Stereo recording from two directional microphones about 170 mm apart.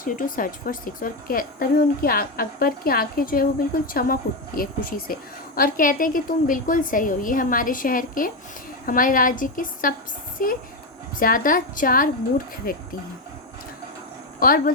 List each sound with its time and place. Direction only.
0.0 s a woman's voice: 55° left (ahead or behind)
14.3 s a woman's voice: 60° left (ahead or behind)